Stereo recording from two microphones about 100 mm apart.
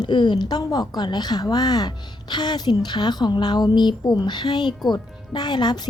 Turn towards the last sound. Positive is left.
turn(degrees=45)  # may be behind; listen again after turning